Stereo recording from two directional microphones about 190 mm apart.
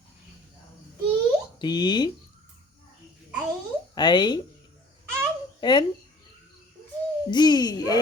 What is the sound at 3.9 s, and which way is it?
Speech, 25° left (ahead or behind).